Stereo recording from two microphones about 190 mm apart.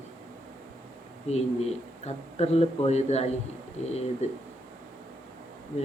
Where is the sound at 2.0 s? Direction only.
35° left (ahead or behind).